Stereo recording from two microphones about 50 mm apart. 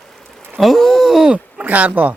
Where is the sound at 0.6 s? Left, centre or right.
Centre.